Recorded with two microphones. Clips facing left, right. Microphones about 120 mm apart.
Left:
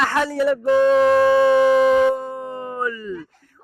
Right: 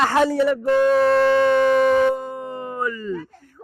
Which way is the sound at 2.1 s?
15° right (ahead or behind).